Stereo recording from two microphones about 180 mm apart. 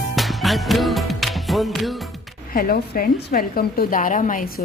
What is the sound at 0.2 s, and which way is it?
Music, centre (ahead or behind).